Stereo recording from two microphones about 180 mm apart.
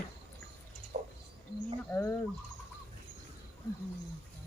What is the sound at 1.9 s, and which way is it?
Speech, 10° left (ahead or behind).